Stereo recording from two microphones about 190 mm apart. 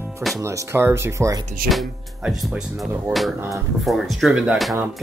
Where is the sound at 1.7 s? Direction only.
Centre (ahead or behind).